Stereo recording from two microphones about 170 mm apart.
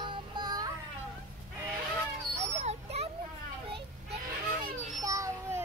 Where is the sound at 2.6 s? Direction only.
40° right (ahead or behind).